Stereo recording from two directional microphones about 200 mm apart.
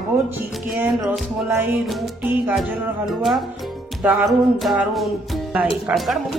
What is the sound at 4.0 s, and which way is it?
Speech, centre (ahead or behind).